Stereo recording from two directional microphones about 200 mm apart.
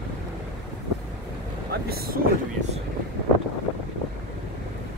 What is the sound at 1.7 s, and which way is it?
Speech, 50° right (ahead or behind).